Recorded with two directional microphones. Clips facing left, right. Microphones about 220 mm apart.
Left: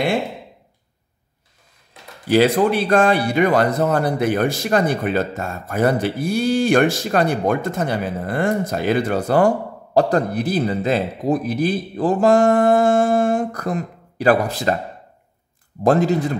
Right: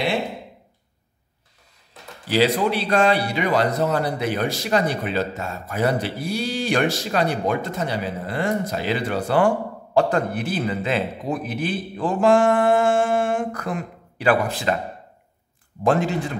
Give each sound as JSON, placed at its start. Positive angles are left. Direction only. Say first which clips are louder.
{"t": 2.2, "sound": "a man's voice", "louder": "left 4 dB", "side_deg": 50}
{"t": 15.8, "sound": "a man's voice", "louder": "left 4 dB", "side_deg": 40}